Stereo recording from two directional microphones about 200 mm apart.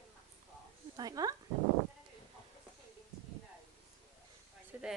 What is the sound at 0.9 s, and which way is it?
Speech, 20° right (ahead or behind).